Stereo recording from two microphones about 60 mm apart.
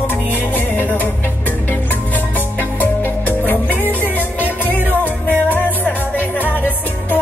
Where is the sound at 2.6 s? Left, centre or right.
Left.